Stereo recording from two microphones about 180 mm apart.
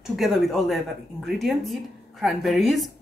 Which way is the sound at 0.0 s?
Centre (ahead or behind).